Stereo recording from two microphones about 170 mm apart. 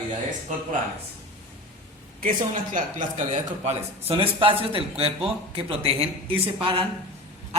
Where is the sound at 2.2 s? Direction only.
55° right (ahead or behind).